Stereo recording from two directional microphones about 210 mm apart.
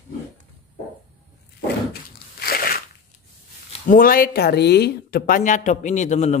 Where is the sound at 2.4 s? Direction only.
45° left (ahead or behind).